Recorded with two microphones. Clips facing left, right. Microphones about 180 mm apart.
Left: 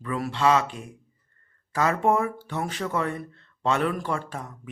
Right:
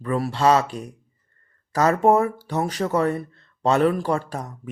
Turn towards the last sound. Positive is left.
turn(degrees=-40)  # may be behind; listen again after turning